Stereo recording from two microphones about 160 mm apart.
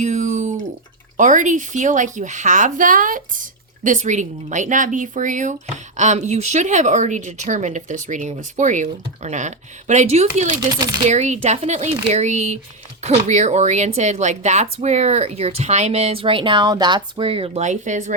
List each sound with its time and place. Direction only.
0.0 s a sound: 50° right (ahead or behind)
1.1 s speech: 55° right (ahead or behind)
10.8 s speech: 25° right (ahead or behind)
11.1 s speech: 45° right (ahead or behind)